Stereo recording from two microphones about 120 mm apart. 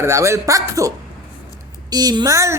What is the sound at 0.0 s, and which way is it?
A man's voice, 25° right (ahead or behind).